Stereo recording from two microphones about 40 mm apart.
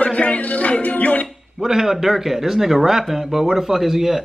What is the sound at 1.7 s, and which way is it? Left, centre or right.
Speech, centre.